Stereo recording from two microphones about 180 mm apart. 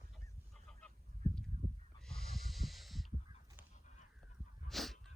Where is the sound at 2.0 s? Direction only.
Centre (ahead or behind).